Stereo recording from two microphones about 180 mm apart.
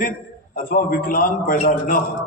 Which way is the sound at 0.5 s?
50° left (ahead or behind).